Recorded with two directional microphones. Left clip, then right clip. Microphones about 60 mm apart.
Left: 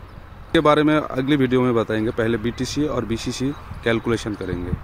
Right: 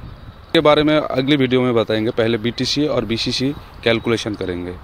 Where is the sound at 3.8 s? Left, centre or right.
Centre.